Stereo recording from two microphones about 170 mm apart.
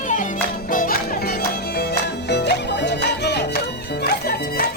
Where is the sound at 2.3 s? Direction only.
80° left.